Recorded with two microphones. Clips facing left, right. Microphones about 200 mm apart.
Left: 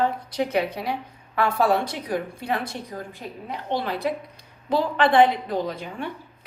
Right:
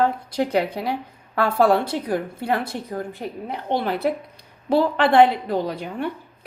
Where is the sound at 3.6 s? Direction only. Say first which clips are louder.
Right 4 dB; 55° right (ahead or behind).